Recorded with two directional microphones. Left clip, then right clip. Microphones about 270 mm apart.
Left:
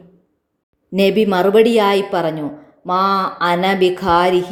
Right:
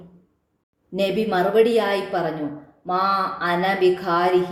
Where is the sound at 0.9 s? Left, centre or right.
Left.